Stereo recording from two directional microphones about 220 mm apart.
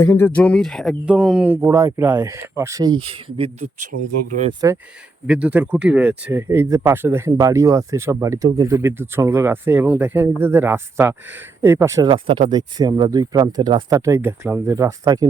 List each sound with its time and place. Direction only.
0.0 s speech: 10° left (ahead or behind); by 3.7 s 25° right (ahead or behind)
4.6 s speech: 15° right (ahead or behind)